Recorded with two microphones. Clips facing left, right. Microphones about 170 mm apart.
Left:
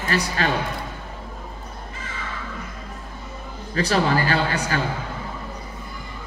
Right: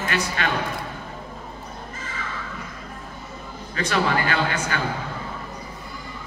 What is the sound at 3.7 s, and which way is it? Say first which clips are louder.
A man's voice: left 2 dB; 35° left (ahead or behind).